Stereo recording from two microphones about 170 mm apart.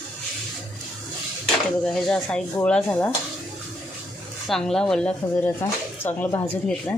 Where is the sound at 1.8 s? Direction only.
5° left (ahead or behind).